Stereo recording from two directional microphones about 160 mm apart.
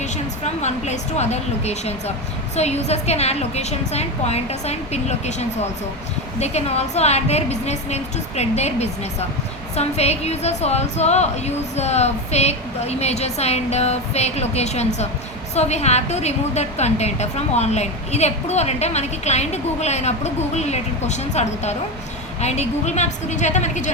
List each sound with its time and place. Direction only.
0.0 s a woman's voice: 45° left (ahead or behind)